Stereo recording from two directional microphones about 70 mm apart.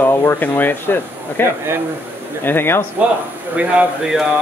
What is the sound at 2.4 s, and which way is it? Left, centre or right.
Speech, left.